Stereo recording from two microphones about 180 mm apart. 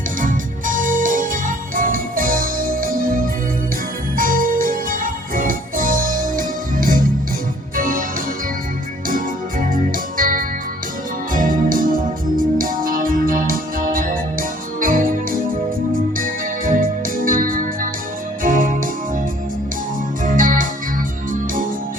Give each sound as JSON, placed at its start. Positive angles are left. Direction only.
{"t": 0.2, "sound": "music", "side_deg": -50}
{"t": 9.7, "sound": "organ", "side_deg": -50}
{"t": 11.3, "sound": "music", "side_deg": -50}
{"t": 20.2, "sound": "organ", "side_deg": -50}